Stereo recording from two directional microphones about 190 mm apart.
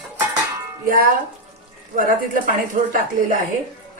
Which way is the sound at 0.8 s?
50° right (ahead or behind).